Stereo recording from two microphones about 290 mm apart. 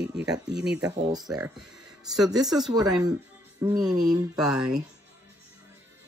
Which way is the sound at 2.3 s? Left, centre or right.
Centre.